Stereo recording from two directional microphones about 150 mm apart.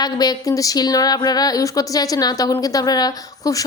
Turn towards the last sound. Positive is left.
turn(degrees=25)  # may be behind; listen again after turning